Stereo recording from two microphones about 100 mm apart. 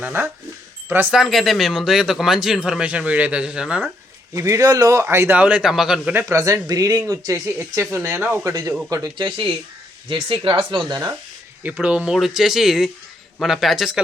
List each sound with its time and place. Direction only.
0.0 s a man's voice: 20° right (ahead or behind)
1.1 s speech: centre (ahead or behind)
4.4 s a man's voice: 30° right (ahead or behind); by 6.1 s 5° right (ahead or behind)
6.1 s speech: 30° right (ahead or behind)
7.6 s a man's voice: 20° right (ahead or behind)
8.4 s speech: 35° right (ahead or behind)
9.1 s speech: 50° right (ahead or behind)
11.6 s speech: 15° right (ahead or behind)